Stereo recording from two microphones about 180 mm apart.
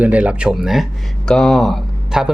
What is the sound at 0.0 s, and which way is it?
Speech, 5° right (ahead or behind).